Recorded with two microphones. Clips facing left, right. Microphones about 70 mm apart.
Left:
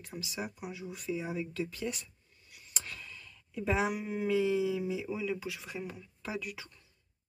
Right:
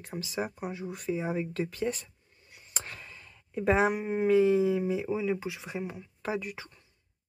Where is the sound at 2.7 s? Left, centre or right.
Right.